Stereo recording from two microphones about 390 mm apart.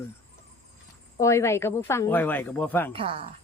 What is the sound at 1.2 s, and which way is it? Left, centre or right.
Speech, centre.